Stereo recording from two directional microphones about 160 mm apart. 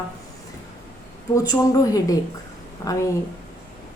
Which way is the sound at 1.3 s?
20° left (ahead or behind).